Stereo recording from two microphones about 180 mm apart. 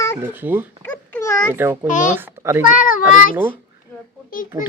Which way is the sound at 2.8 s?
50° left (ahead or behind).